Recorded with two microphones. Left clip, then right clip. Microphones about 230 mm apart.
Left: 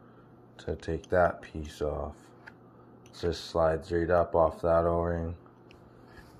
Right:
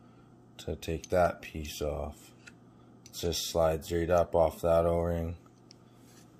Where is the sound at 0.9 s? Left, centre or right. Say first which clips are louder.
Left 2 dB; centre.